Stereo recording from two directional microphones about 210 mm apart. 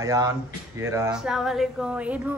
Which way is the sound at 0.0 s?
15° right (ahead or behind).